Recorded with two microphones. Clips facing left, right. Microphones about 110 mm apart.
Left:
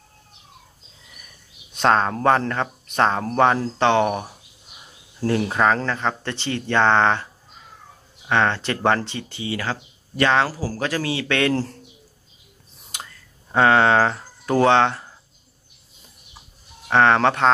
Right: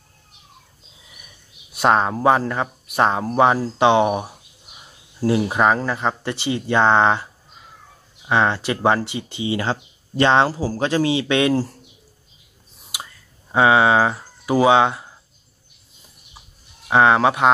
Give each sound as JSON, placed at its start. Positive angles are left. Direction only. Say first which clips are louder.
{"t": 1.7, "sound": "speech", "louder": "right 1 dB", "side_deg": -10}
{"t": 8.3, "sound": "speech", "louder": "right 1 dB", "side_deg": -10}
{"t": 12.9, "sound": "a sound", "louder": "right 2 dB", "side_deg": -10}
{"t": 13.5, "sound": "speech", "louder": "right 1 dB", "side_deg": -10}
{"t": 16.8, "sound": "speech", "louder": "right 1 dB", "side_deg": -10}